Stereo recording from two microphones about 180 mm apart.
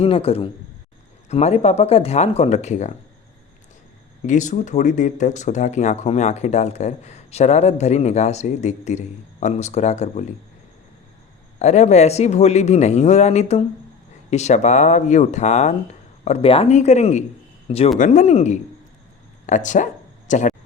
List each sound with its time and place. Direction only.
0.0 s speech: 30° left (ahead or behind)
4.2 s speech: 40° left (ahead or behind)
11.6 s speech: 40° left (ahead or behind)